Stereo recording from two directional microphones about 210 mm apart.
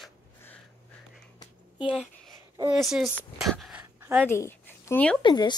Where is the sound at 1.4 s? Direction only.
25° left (ahead or behind).